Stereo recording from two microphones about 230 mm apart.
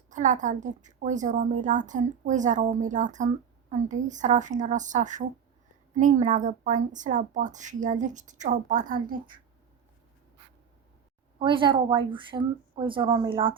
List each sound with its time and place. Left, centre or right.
0.1 s a woman's voice: right
11.3 s a woman's voice: right